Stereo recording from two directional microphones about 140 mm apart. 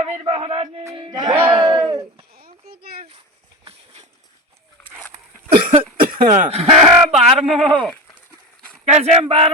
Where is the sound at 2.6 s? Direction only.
90° right.